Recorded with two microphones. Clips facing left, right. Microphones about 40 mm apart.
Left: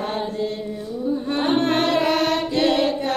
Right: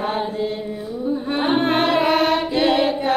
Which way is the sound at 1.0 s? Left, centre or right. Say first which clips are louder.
Right 1 dB; centre.